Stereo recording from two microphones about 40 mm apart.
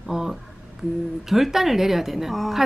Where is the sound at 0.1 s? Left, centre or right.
Centre.